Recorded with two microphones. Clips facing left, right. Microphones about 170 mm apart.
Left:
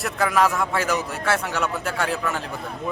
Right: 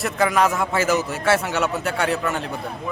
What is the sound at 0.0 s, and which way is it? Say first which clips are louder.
A man's voice: right 1 dB; centre (ahead or behind).